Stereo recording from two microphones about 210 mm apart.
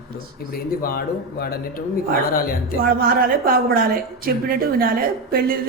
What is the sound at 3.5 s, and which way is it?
A woman's voice, 45° right (ahead or behind).